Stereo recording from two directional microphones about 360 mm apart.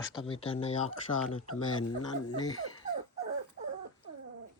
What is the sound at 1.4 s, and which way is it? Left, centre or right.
Speech, left.